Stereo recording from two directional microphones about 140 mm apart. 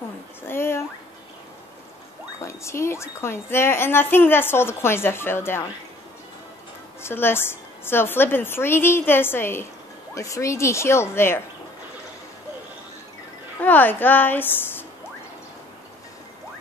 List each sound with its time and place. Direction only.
0.5 s a sound: 15° left (ahead or behind)
2.4 s a woman's voice: 20° left (ahead or behind)
7.0 s a woman's voice: 15° left (ahead or behind)
13.6 s a woman's voice: 15° left (ahead or behind)